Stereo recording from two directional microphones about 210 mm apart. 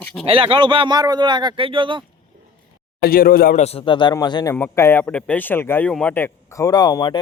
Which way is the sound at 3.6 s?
25° left (ahead or behind).